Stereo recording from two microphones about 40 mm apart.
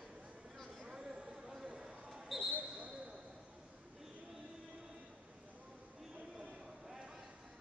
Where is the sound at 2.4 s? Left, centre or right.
Right.